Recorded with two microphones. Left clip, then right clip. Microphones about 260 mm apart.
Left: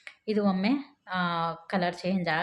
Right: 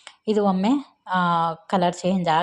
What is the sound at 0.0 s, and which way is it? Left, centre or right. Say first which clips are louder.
Speech: right 7 dB; right.